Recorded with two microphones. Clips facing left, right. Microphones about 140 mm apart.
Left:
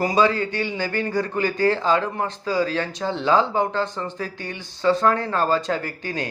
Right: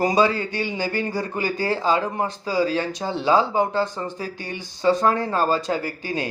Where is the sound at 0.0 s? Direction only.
15° right (ahead or behind).